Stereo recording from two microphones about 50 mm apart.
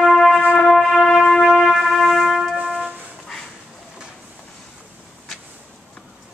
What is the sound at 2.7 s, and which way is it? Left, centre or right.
Music, centre.